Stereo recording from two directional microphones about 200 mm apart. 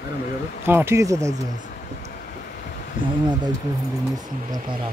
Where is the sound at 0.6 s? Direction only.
10° right (ahead or behind).